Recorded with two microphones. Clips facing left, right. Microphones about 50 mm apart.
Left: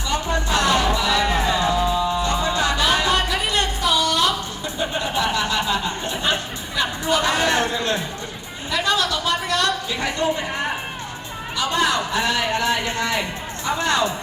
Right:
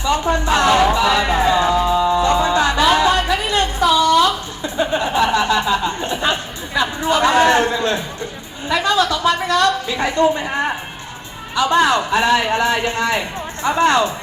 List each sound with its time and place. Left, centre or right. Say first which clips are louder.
0.0 s music: right 6 dB; right
2.0 s music: right 6 dB; right
2.2 s music: right 6 dB; right
4.6 s chuckle: right 7 dB; right
6.7 s music: right 4 dB; right
8.7 s a sound: right 5 dB; right
11.5 s a man's voice: right 6 dB; right